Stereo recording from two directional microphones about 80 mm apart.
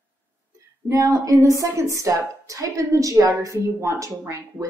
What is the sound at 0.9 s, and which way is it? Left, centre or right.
A woman's voice, right.